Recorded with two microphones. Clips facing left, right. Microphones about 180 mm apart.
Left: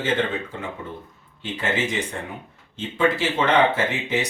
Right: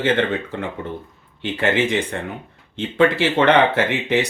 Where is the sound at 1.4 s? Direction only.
65° right (ahead or behind).